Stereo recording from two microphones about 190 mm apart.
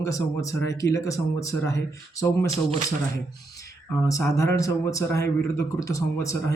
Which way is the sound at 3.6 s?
15° left (ahead or behind).